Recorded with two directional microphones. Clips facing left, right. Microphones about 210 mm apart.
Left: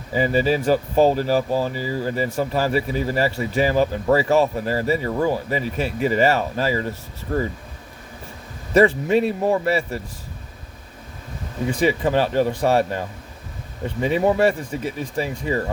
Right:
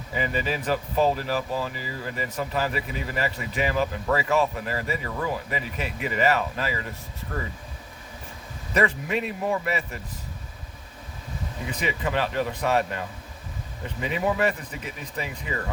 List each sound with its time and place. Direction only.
0.1 s speech: 35° left (ahead or behind)
8.7 s speech: 30° left (ahead or behind)
11.7 s speech: 30° left (ahead or behind)